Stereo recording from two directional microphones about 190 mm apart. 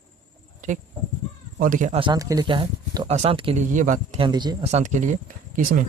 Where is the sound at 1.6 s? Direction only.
45° right (ahead or behind).